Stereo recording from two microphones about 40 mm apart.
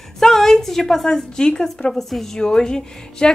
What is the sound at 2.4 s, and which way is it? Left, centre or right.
Speech, centre.